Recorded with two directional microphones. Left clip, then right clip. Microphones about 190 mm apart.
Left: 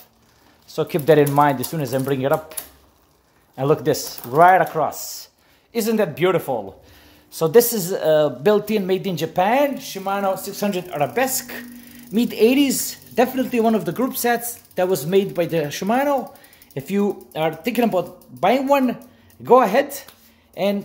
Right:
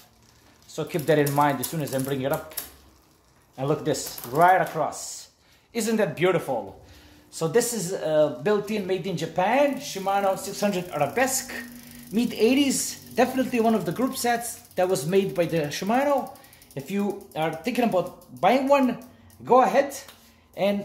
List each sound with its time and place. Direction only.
0.7 s speech: 35° left (ahead or behind)
3.5 s a woman's voice: 35° left (ahead or behind)